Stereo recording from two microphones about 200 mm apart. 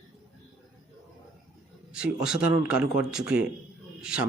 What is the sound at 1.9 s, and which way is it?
Speech, 5° right (ahead or behind).